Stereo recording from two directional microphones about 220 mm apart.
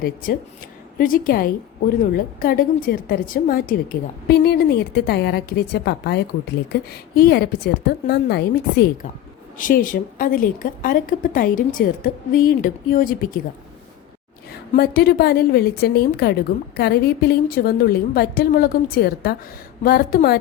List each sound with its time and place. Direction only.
0.0 s a woman's voice: 40° left (ahead or behind)
9.6 s a woman's voice: 40° left (ahead or behind)
14.8 s a woman's voice: 45° left (ahead or behind)